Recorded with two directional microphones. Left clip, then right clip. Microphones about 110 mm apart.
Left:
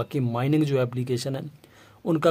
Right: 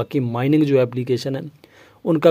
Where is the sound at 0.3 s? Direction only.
45° right (ahead or behind).